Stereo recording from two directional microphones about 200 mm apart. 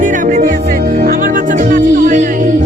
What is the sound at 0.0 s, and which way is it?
Music, 40° right (ahead or behind).